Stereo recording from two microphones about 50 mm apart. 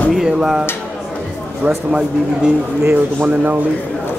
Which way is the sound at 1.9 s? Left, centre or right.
Centre.